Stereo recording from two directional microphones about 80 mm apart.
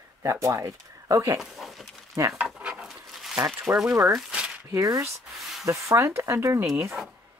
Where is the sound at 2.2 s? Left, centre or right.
Right.